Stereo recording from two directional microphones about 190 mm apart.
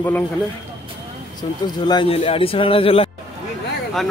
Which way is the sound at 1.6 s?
20° left (ahead or behind).